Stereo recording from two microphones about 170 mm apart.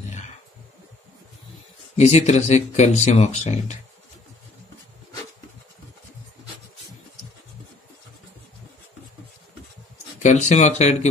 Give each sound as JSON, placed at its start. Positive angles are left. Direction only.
{"t": 2.0, "sound": "speech", "side_deg": 40}
{"t": 10.2, "sound": "speech", "side_deg": 45}